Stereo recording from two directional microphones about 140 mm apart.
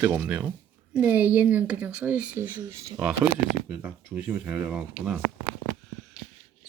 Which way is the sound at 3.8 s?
10° right (ahead or behind).